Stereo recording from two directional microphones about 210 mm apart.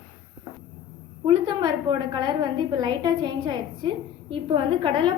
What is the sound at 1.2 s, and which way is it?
A woman's voice, 20° right (ahead or behind).